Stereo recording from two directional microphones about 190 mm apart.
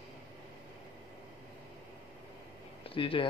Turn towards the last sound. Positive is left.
turn(degrees=25)  # may be behind; listen again after turning